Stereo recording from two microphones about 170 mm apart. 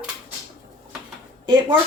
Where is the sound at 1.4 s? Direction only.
25° right (ahead or behind).